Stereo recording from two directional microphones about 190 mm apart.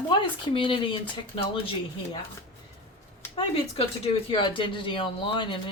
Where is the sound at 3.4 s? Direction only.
30° left (ahead or behind).